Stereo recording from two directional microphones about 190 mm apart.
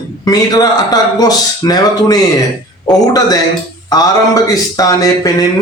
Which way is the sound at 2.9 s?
Centre (ahead or behind).